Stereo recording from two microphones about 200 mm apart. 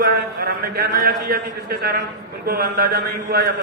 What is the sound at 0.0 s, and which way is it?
A man's voice, 50° right (ahead or behind).